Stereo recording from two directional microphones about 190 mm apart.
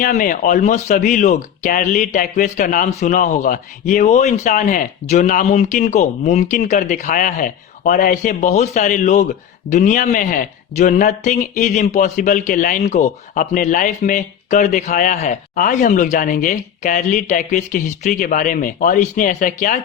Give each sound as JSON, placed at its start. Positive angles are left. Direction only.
{"t": 0.0, "sound": "speech", "side_deg": 45}